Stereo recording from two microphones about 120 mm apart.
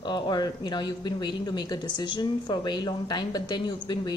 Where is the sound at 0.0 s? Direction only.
35° left (ahead or behind).